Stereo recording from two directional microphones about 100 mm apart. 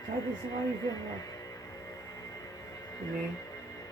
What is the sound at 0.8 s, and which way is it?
Speech, 35° left (ahead or behind).